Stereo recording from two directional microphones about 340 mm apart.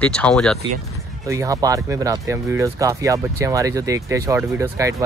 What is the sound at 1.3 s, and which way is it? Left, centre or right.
Speech, centre.